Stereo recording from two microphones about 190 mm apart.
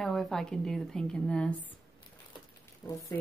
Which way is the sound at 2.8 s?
5° left (ahead or behind).